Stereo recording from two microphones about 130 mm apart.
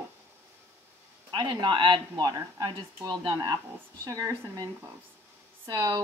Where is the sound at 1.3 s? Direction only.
35° right (ahead or behind).